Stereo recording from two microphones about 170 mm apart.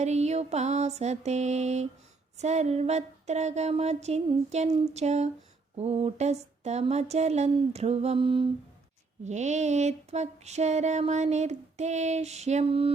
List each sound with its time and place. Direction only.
0.0 s music: 40° right (ahead or behind)
9.2 s music: 45° right (ahead or behind)